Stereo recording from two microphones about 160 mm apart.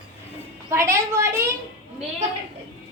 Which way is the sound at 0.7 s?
15° right (ahead or behind).